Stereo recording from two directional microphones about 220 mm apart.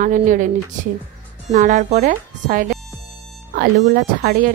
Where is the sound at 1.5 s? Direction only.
35° right (ahead or behind).